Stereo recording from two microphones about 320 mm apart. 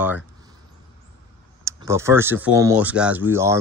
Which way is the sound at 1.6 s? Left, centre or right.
Centre.